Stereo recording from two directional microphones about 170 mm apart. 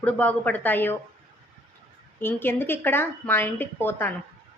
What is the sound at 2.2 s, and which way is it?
A woman's voice, 15° left (ahead or behind).